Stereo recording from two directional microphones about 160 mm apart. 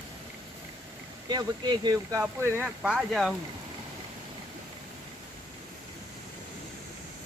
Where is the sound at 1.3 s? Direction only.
25° right (ahead or behind).